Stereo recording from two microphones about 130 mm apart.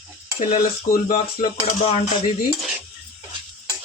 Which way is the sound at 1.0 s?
90° left.